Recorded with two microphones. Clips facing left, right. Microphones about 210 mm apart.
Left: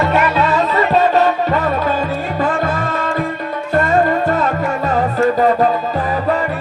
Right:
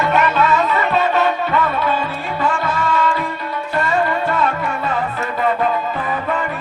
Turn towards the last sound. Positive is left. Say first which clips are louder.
# left 7 dB
turn(degrees=40)  # may be behind; listen again after turning